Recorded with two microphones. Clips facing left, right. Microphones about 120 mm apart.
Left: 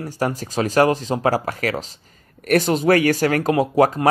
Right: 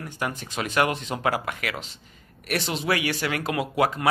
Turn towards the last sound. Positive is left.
turn(degrees=40)  # may be behind; listen again after turning